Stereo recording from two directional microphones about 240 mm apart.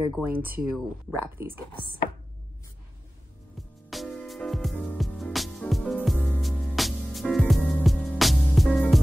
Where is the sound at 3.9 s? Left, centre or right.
Centre.